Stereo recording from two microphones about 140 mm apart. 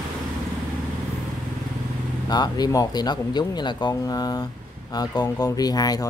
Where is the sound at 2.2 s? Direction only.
30° left (ahead or behind).